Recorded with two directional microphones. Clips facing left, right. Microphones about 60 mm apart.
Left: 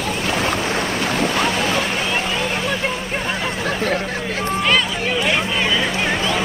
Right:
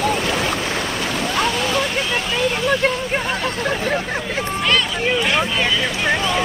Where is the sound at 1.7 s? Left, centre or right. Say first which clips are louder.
Even; left.